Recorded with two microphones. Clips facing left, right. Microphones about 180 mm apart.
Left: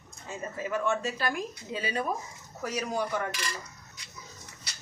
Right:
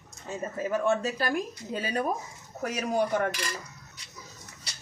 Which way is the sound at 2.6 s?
55° right (ahead or behind).